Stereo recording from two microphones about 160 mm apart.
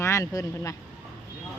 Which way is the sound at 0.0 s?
20° left (ahead or behind).